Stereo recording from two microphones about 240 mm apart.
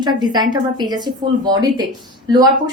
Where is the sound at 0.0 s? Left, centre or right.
Centre.